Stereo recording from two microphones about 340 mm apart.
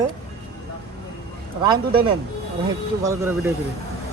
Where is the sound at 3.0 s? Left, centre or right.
Centre.